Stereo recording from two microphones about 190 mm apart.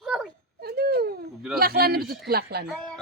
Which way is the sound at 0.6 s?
55° right (ahead or behind).